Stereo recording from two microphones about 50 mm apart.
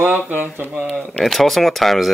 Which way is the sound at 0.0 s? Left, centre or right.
Right.